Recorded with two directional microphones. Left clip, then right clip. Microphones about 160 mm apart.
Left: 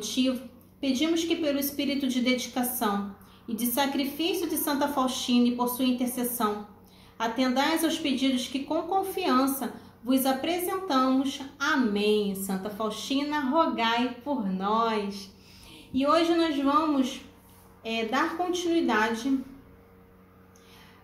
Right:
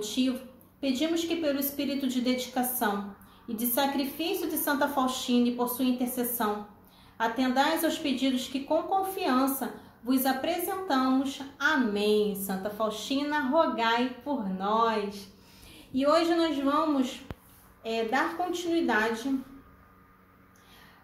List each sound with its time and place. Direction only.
0.0 s a woman's voice: 10° right (ahead or behind)